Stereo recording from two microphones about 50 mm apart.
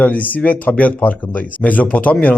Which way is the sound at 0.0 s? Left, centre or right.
Left.